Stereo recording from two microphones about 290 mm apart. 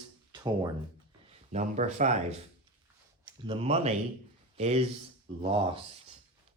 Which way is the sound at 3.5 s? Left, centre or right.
Centre.